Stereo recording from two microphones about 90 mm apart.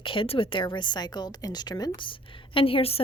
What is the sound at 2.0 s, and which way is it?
A woman's voice, 70° left (ahead or behind).